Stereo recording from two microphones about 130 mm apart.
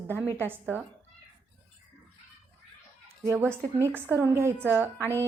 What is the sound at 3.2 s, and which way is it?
A woman's voice, 20° right (ahead or behind).